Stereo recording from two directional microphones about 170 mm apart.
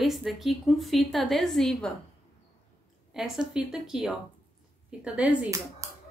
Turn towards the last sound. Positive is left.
turn(degrees=-20)  # may be behind; listen again after turning